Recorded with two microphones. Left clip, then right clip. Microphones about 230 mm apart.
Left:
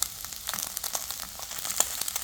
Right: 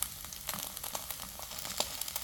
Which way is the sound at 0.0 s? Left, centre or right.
Centre.